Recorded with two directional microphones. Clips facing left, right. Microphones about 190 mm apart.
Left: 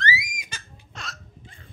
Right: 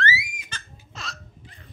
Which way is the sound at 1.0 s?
5° right (ahead or behind).